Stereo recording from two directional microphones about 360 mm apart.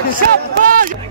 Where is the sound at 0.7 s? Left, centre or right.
Right.